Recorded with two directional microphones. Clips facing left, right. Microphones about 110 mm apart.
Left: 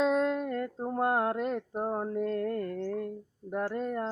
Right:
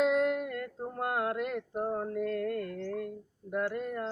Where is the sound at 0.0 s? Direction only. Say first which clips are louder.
Even; 30° left (ahead or behind).